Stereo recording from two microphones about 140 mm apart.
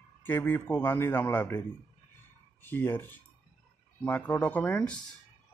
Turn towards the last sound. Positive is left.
turn(degrees=10)  # may be behind; listen again after turning